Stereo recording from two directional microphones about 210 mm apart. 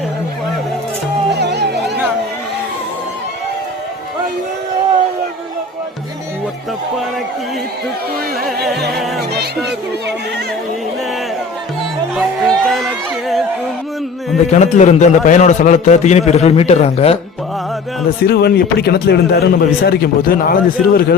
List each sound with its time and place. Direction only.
1.3 s music: 55° right (ahead or behind)
12.1 s music: centre (ahead or behind)
14.5 s a man's voice: 35° left (ahead or behind)
18.3 s a man's voice: 50° left (ahead or behind)